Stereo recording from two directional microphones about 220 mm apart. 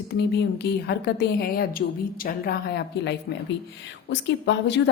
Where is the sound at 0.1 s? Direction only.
50° left (ahead or behind).